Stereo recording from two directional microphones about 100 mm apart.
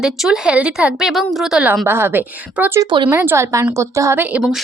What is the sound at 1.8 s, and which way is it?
Speech, 25° right (ahead or behind).